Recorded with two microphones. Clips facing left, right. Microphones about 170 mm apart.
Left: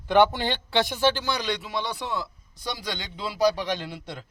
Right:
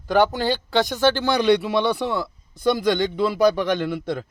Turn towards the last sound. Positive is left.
turn(degrees=-55)  # may be behind; listen again after turning